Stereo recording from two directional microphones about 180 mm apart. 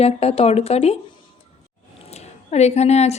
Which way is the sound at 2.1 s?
35° left (ahead or behind).